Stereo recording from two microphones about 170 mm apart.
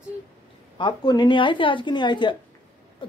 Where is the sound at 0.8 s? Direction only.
25° left (ahead or behind).